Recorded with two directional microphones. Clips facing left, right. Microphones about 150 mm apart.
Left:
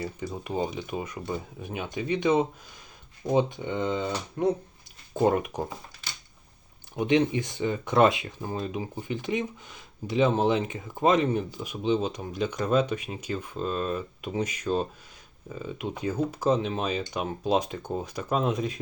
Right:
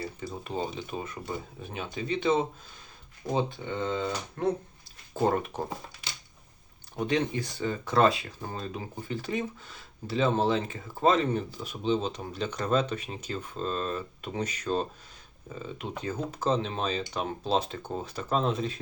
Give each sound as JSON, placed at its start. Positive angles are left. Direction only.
{"t": 0.0, "sound": "speech", "side_deg": 15}
{"t": 6.9, "sound": "speech", "side_deg": 20}